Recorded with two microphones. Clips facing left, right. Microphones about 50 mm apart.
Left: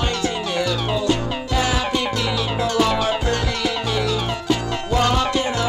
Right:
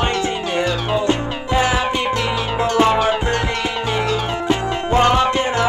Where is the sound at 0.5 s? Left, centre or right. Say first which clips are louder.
Right 5 dB; right.